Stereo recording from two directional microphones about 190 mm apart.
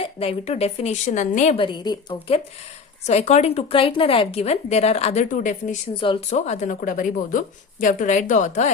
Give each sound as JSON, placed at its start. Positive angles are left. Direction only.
{"t": 0.0, "sound": "a woman's voice", "side_deg": 30}
{"t": 3.1, "sound": "a woman's voice", "side_deg": 35}
{"t": 5.9, "sound": "speech", "side_deg": 25}
{"t": 6.3, "sound": "a woman's voice", "side_deg": 40}